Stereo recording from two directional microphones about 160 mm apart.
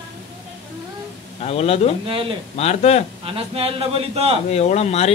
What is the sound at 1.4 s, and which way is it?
Stir, 40° left (ahead or behind).